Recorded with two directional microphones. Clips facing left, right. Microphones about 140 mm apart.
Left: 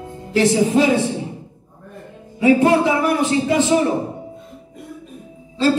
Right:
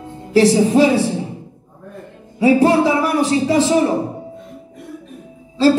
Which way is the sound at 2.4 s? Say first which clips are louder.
Right 1 dB; 30° right (ahead or behind).